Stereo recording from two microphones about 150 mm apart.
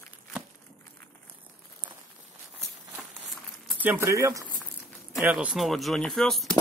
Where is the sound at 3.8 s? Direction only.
15° right (ahead or behind).